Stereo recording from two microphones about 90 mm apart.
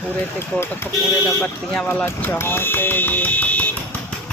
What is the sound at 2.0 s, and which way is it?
Speech, 25° left (ahead or behind).